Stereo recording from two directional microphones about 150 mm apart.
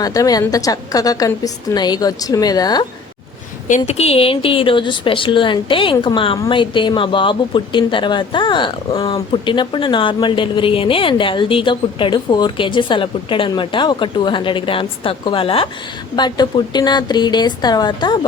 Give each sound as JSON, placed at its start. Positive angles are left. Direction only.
{"t": 0.0, "sound": "a woman's voice", "side_deg": 25}
{"t": 3.7, "sound": "a woman's voice", "side_deg": 45}